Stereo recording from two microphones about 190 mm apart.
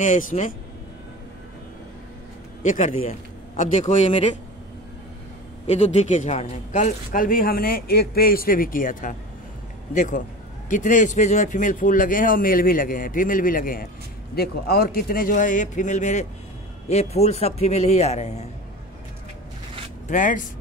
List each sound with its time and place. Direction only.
0.0 s a man's voice: 40° left (ahead or behind)
2.6 s a man's voice: 40° left (ahead or behind)
5.7 s a man's voice: 35° left (ahead or behind)
20.1 s speech: 45° left (ahead or behind)